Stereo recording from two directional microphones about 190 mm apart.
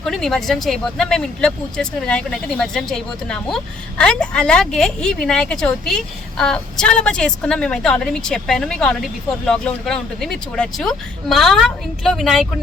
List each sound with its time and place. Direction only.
0.0 s speech: centre (ahead or behind)